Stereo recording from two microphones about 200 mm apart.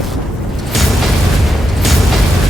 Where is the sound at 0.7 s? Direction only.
Centre (ahead or behind).